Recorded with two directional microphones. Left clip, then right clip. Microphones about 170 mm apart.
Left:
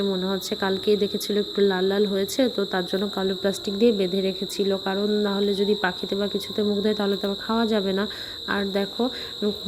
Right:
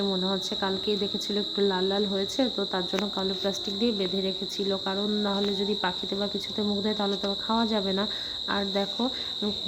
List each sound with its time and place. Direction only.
0.1 s speech: 15° left (ahead or behind)